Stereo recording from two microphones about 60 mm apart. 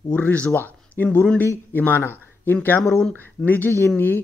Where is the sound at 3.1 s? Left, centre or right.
Left.